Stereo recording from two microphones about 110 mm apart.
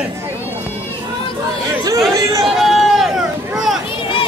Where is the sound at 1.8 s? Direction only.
30° right (ahead or behind).